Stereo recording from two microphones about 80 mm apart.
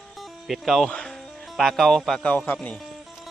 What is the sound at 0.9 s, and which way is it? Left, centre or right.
Speech, centre.